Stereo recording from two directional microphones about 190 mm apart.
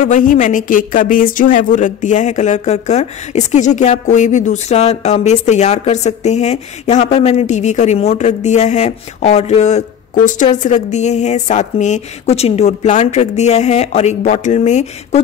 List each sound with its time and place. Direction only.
0.0 s speech: 45° left (ahead or behind)